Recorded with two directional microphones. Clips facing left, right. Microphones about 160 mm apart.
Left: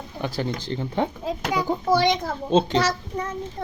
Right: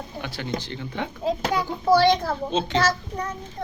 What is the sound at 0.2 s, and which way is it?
Speech, 35° left (ahead or behind).